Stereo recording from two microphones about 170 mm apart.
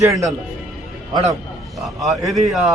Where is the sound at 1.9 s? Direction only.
Centre (ahead or behind).